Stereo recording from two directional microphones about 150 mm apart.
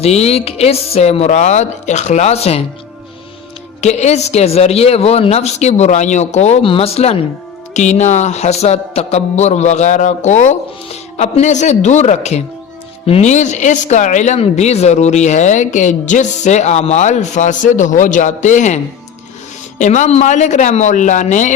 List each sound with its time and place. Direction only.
0.0 s speech: 45° left (ahead or behind)
3.8 s speech: 50° left (ahead or behind)
19.8 s speech: 50° left (ahead or behind)